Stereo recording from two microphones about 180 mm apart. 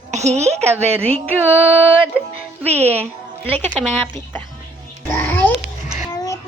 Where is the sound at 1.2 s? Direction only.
10° right (ahead or behind).